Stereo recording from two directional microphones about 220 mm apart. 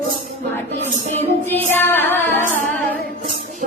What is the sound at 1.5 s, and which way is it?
Female singing, 10° left (ahead or behind).